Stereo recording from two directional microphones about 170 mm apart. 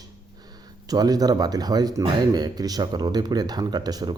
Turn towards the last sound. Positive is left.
turn(degrees=-25)  # may be behind; listen again after turning